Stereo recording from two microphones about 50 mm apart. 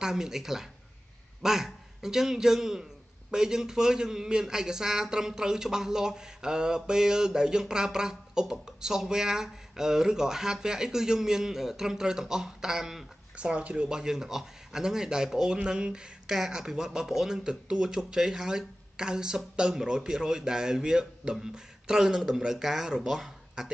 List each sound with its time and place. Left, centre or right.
0.0 s a man's voice: centre
13.4 s speech: right
13.8 s a man's voice: centre